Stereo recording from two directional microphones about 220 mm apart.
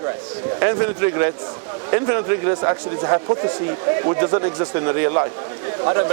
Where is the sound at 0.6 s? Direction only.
20° right (ahead or behind).